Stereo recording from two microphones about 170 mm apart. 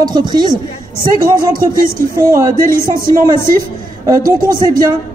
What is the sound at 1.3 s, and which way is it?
Speech, 55° right (ahead or behind).